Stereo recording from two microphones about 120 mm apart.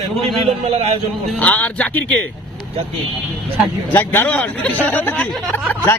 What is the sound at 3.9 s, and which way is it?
Speech, 20° left (ahead or behind).